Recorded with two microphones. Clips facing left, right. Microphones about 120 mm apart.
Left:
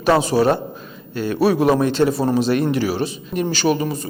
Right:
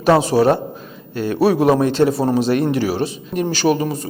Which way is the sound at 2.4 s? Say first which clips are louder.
Right 1 dB; 55° right (ahead or behind).